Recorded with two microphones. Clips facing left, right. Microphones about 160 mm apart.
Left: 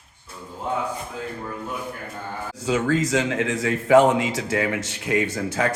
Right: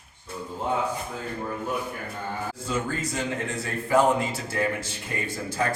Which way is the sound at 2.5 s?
90° left.